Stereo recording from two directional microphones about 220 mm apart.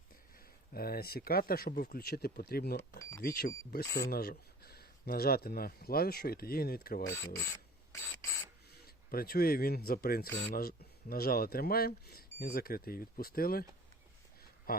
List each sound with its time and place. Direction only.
0.3 s speech: 45° left (ahead or behind)
3.0 s speech: 15° left (ahead or behind)
3.2 s speech: 45° left (ahead or behind)
7.0 s ratchet: 10° left (ahead or behind)
9.0 s speech: 45° left (ahead or behind)
14.7 s speech: 40° left (ahead or behind)